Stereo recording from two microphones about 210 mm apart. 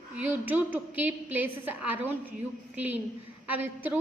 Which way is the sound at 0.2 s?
10° right (ahead or behind).